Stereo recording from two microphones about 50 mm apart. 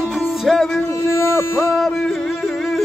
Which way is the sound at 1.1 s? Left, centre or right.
Left.